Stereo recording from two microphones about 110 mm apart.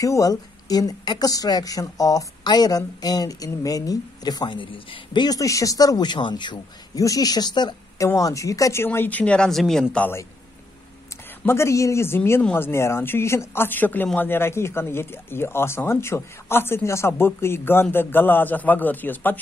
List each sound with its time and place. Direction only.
0.0 s a woman's voice: 30° left (ahead or behind)
8.1 s a woman's voice: 30° left (ahead or behind)
8.8 s a man's voice: 20° left (ahead or behind)
11.4 s speech: 25° left (ahead or behind)
12.2 s a man's voice: 15° left (ahead or behind)